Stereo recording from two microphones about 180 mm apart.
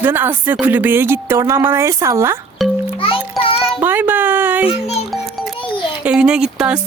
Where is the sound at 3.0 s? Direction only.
30° left (ahead or behind).